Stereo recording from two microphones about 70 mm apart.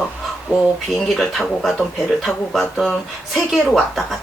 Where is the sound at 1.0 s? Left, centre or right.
Centre.